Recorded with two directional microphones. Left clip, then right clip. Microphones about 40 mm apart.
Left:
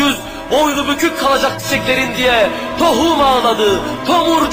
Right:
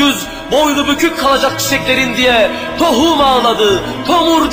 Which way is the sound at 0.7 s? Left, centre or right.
Left.